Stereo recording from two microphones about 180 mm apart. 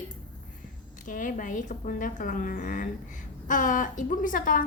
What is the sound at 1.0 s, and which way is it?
A woman's voice, 45° left (ahead or behind).